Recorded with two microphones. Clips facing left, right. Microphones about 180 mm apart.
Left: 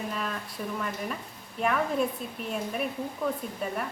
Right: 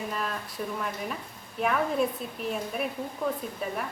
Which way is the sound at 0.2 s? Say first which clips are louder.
Right 1 dB; centre (ahead or behind).